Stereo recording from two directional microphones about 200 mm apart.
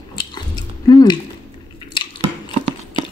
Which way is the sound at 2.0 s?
25° left (ahead or behind).